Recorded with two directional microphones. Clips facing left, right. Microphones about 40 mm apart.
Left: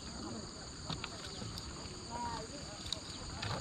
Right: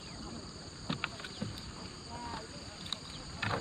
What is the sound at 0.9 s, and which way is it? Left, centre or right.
Boat, right.